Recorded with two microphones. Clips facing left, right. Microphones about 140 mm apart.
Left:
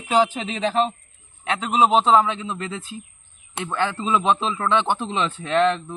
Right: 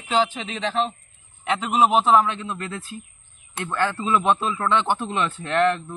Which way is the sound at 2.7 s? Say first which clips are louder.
Left 1 dB; 20° left (ahead or behind).